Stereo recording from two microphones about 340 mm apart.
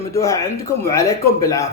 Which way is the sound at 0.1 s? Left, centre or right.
Centre.